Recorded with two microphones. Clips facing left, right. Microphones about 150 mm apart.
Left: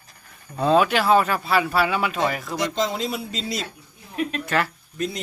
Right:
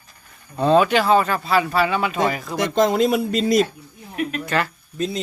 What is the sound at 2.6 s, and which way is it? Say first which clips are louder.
Speech: right 8 dB; 55° right (ahead or behind).